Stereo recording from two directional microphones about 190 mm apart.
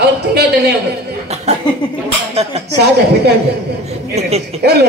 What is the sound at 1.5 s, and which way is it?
Speech, 35° right (ahead or behind).